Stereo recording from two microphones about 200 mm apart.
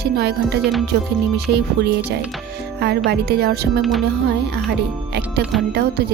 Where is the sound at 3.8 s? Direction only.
Centre (ahead or behind).